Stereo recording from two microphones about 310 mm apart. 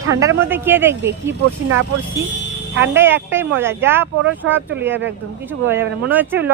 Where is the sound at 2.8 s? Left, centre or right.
Centre.